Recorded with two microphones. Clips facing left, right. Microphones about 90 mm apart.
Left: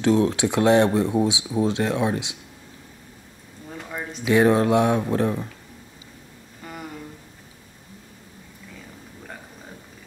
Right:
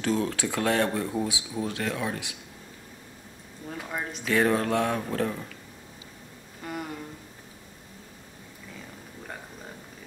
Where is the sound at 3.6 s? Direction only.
5° right (ahead or behind).